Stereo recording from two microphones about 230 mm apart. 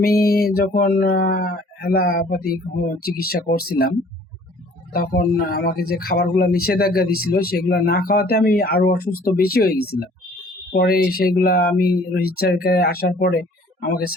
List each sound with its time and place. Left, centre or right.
0.2 s speech: left
4.9 s speech: left